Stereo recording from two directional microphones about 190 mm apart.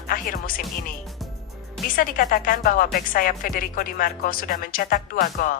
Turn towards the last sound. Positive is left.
turn(degrees=45)  # may be behind; listen again after turning